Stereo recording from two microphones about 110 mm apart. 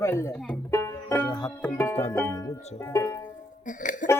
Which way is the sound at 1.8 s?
20° left (ahead or behind).